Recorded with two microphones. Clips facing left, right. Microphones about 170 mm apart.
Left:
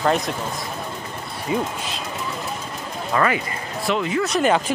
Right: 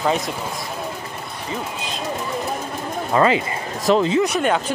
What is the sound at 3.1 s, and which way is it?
Speech, 25° right (ahead or behind).